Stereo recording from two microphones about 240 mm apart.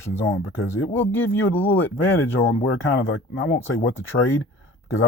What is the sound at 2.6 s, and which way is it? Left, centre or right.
Speech, left.